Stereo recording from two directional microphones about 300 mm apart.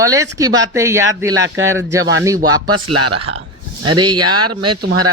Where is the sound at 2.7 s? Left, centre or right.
Right.